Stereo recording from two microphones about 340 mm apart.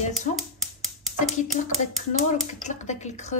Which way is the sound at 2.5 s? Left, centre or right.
Left.